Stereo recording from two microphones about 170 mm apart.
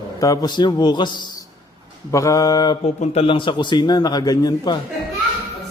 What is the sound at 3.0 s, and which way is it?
A man's voice, 35° left (ahead or behind).